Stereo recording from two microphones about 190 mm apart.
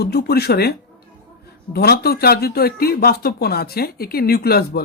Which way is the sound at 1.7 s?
55° left (ahead or behind).